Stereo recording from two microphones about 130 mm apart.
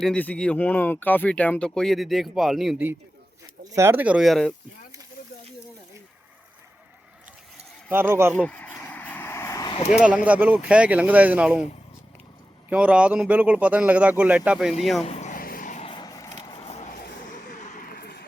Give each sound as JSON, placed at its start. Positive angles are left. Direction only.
{"t": 0.0, "sound": "speech", "side_deg": 10}
{"t": 3.6, "sound": "speech", "side_deg": -25}
{"t": 7.9, "sound": "speech", "side_deg": -15}
{"t": 8.4, "sound": "a sound", "side_deg": 10}
{"t": 10.2, "sound": "speech", "side_deg": -10}
{"t": 12.7, "sound": "speech", "side_deg": -10}
{"t": 15.0, "sound": "a sound", "side_deg": 60}
{"t": 15.8, "sound": "vehicle", "side_deg": 40}
{"t": 17.3, "sound": "a sound", "side_deg": 80}